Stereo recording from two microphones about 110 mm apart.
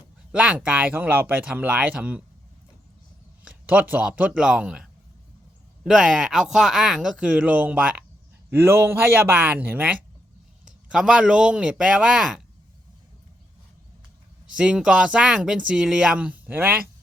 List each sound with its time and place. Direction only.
0.3 s speech: 10° right (ahead or behind)
3.4 s speech: 15° right (ahead or behind)
14.5 s speech: 10° right (ahead or behind)